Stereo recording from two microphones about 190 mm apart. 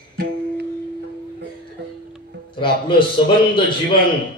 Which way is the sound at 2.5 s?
25° left (ahead or behind).